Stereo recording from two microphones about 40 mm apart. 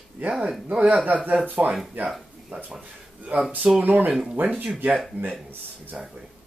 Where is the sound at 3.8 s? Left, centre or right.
Right.